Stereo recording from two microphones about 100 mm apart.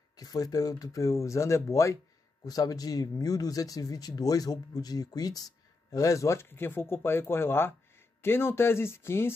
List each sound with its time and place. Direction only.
0.1 s speech: 40° left (ahead or behind)